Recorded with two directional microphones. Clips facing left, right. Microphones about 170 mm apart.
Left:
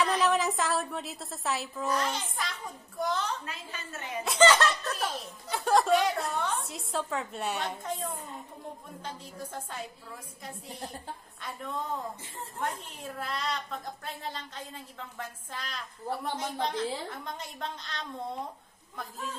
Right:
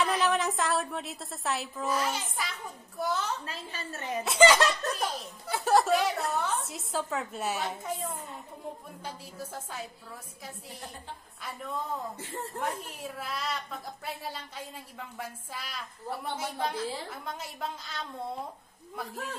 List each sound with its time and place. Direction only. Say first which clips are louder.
0.0 s a woman's voice: left 1 dB; centre (ahead or behind)
3.4 s a woman's voice: right 2 dB; 35° right (ahead or behind)
4.2 s a woman's voice: right 1 dB; 5° right (ahead or behind)
4.9 s a woman's voice: right 1 dB; centre (ahead or behind)
11.4 s a woman's voice: even; centre (ahead or behind)
12.2 s a woman's voice: right 5 dB; 70° right (ahead or behind)
12.5 s a woman's voice: left 1 dB; 5° right (ahead or behind)